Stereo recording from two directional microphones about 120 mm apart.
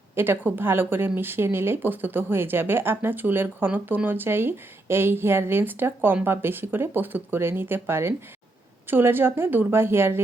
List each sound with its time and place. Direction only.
0.2 s a woman's voice: 15° right (ahead or behind)